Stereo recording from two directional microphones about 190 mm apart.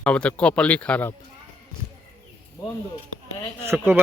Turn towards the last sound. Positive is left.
turn(degrees=-15)  # may be behind; listen again after turning